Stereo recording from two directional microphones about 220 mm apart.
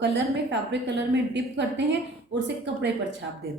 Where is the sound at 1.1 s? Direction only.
55° right (ahead or behind).